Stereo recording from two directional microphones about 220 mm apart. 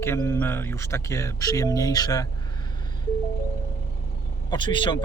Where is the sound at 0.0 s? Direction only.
10° left (ahead or behind).